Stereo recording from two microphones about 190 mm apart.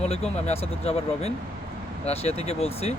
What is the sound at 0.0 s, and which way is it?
Speech, 35° left (ahead or behind).